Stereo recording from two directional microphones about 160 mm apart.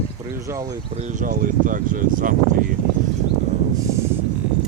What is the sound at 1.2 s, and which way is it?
Speech, 60° right (ahead or behind).